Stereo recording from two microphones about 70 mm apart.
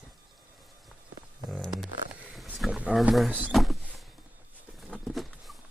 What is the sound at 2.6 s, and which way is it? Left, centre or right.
Speech, centre.